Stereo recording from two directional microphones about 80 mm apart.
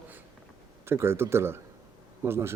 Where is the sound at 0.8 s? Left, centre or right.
Right.